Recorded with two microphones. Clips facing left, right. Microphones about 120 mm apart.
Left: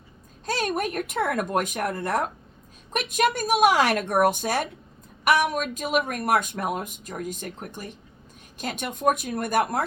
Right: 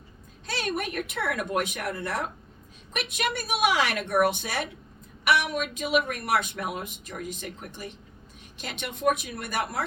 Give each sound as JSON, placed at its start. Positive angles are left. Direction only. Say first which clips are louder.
{"t": 0.4, "sound": "speech", "louder": "left 4 dB", "side_deg": 45}